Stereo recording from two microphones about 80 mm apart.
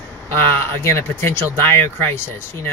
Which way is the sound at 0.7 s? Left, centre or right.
Left.